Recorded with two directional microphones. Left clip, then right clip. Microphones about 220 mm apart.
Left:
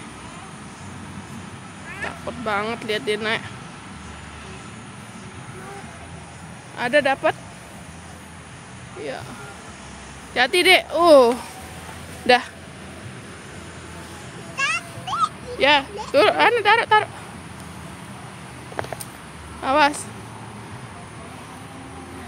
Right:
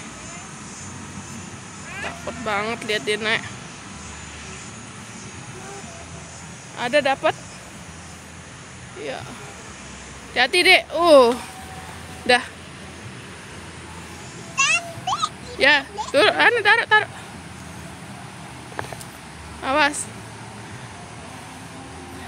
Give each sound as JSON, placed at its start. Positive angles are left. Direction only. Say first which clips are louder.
{"t": 2.0, "sound": "speech", "louder": "left 1 dB", "side_deg": 5}
{"t": 6.8, "sound": "speech", "louder": "left 1 dB", "side_deg": 5}
{"t": 10.3, "sound": "speech", "louder": "even", "side_deg": 10}
{"t": 14.6, "sound": "music", "louder": "right 4 dB", "side_deg": -35}
{"t": 15.6, "sound": "speech", "louder": "even", "side_deg": 0}
{"t": 19.6, "sound": "speech", "louder": "left 2 dB", "side_deg": 5}